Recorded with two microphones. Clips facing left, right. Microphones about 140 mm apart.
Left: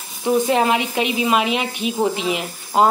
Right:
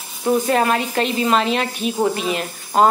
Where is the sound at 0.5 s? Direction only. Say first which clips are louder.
Even; 15° left (ahead or behind).